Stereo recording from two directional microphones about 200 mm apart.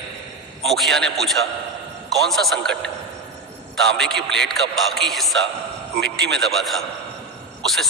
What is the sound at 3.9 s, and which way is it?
A man's voice, 5° left (ahead or behind).